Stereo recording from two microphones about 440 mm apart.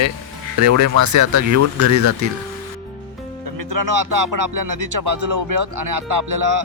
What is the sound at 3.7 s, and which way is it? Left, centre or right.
Music, right.